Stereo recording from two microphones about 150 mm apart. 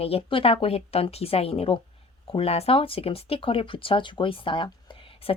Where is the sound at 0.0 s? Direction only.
40° left (ahead or behind).